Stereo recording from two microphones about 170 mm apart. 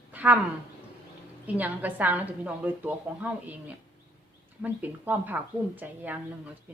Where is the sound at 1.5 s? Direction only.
10° right (ahead or behind).